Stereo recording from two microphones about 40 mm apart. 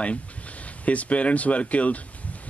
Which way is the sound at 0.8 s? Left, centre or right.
Left.